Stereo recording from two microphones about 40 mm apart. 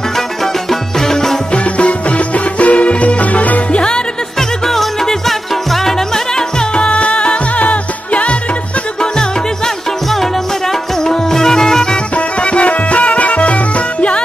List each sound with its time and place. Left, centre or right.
0.7 s music: centre
1.5 s music: left
3.7 s music: left
4.4 s music: centre
6.8 s music: left
11.1 s music: centre
12.4 s music: left